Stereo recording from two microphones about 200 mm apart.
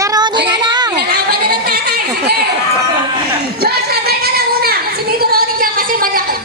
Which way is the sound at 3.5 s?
50° right (ahead or behind).